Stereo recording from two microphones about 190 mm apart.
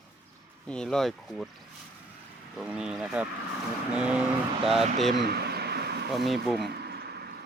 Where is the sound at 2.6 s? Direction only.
5° right (ahead or behind).